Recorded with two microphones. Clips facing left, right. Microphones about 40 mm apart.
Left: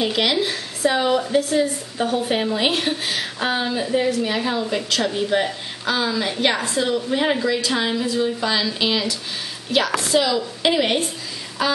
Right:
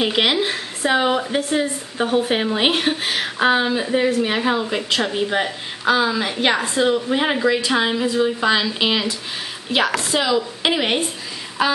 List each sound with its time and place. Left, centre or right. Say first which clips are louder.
0.0 s a woman's voice: right 2 dB; right